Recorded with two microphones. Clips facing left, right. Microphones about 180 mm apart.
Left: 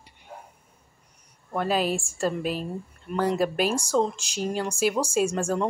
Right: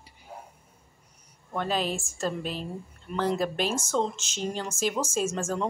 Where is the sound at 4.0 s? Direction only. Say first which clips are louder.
Left 3 dB; 5° left (ahead or behind).